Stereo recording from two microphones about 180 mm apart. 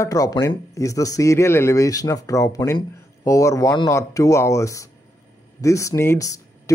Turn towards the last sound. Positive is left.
turn(degrees=20)  # may be behind; listen again after turning